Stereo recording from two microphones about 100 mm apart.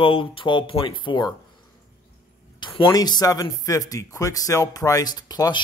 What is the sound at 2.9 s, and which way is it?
Speech, 40° left (ahead or behind).